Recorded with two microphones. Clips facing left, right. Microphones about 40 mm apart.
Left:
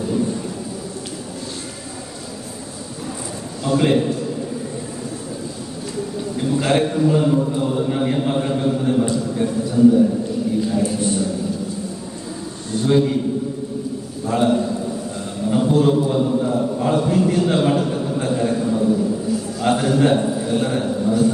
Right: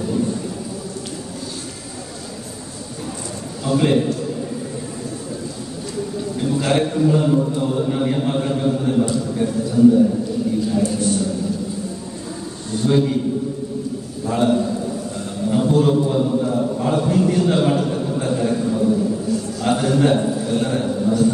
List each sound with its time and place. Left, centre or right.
3.6 s a man's voice: centre
6.4 s a man's voice: centre
10.7 s speech: centre
12.8 s a man's voice: centre
14.2 s a man's voice: centre